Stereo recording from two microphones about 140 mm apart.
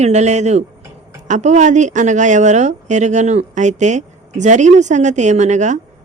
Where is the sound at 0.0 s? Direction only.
55° right (ahead or behind).